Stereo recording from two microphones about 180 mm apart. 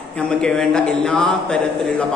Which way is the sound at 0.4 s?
5° left (ahead or behind).